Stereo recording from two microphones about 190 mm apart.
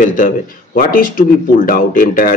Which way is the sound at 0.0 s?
45° left (ahead or behind).